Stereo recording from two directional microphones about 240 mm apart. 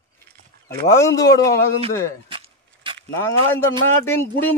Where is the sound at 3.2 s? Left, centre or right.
Centre.